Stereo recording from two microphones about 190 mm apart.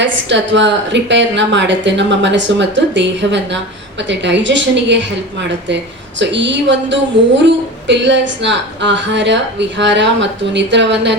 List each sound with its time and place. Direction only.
0.0 s a woman's voice: 70° right (ahead or behind)